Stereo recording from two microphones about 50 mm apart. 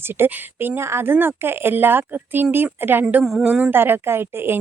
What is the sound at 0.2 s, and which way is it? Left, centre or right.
Speech, right.